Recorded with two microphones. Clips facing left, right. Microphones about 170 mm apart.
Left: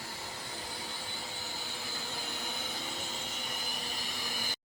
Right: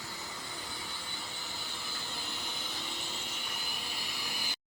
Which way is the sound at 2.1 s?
45° left (ahead or behind).